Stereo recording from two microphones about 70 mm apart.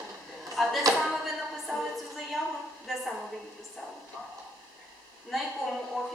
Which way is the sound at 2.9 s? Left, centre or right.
Centre.